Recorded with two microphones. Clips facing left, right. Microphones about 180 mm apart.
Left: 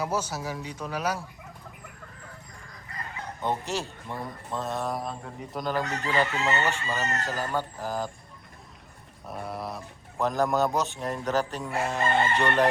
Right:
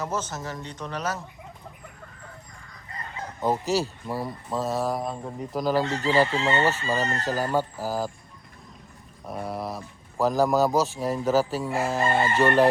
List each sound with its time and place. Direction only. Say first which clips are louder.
0.0 s speech: left 1 dB; 10° left (ahead or behind)
3.4 s speech: right 6 dB; centre (ahead or behind)
5.8 s chicken: right 5 dB; 30° right (ahead or behind)
7.5 s speech: right 4 dB; 5° right (ahead or behind)
9.2 s speech: right 3 dB; centre (ahead or behind)
11.7 s chicken: even; 35° right (ahead or behind)
12.4 s speech: right 9 dB; 5° right (ahead or behind)